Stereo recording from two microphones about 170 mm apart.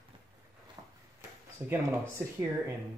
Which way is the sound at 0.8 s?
20° right (ahead or behind).